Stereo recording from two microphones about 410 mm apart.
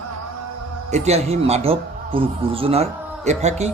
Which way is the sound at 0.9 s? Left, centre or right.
Centre.